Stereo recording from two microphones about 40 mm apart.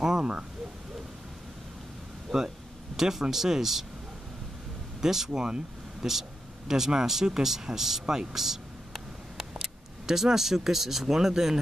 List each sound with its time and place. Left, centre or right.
0.0 s speech: centre
2.3 s speech: centre
5.0 s speech: centre
8.1 s a sound: centre